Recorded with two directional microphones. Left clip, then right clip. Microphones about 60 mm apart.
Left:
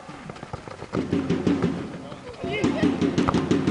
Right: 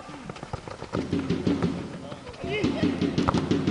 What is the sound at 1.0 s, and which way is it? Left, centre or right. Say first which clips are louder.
Music: left 4 dB; left.